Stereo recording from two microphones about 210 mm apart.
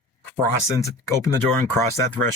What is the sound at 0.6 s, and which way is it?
Speech, 15° left (ahead or behind).